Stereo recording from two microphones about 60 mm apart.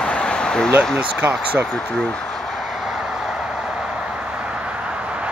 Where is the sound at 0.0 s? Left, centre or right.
Centre.